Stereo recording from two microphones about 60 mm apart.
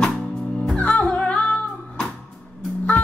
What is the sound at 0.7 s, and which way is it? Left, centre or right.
Music, left.